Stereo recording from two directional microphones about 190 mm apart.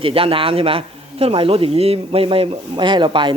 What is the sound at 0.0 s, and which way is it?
Speech, 30° right (ahead or behind).